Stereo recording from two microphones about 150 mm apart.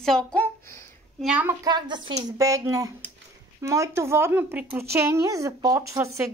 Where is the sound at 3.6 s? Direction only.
20° right (ahead or behind).